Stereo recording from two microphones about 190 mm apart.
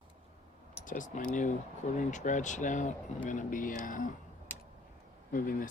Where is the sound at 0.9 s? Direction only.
45° left (ahead or behind).